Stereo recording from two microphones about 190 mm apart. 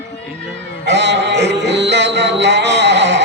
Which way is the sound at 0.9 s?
65° right (ahead or behind).